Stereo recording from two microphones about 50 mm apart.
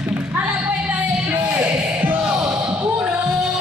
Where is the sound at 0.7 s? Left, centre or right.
Right.